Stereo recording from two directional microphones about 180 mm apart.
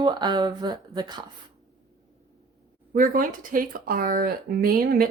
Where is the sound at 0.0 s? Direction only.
25° right (ahead or behind).